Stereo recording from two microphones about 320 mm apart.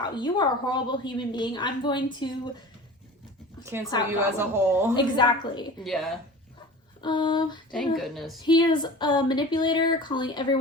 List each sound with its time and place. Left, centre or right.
0.0 s speech: centre
3.9 s speech: centre
4.4 s speech: centre
4.9 s speech: centre
5.8 s a woman's voice: centre
7.0 s speech: centre
7.7 s a woman's voice: centre
8.4 s speech: centre